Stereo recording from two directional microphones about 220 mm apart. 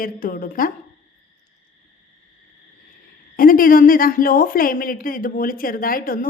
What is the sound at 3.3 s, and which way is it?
A woman's voice, 40° left (ahead or behind).